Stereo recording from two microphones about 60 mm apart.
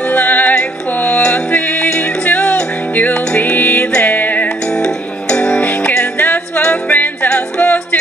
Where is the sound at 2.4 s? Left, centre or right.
Centre.